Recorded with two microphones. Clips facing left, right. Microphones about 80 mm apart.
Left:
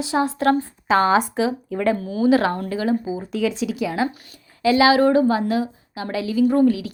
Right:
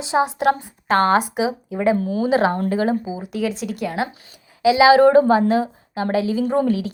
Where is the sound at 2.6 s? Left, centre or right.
Right.